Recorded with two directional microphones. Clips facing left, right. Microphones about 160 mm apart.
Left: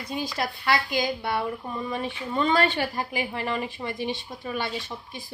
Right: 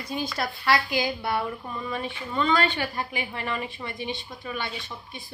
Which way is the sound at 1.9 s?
35° left (ahead or behind).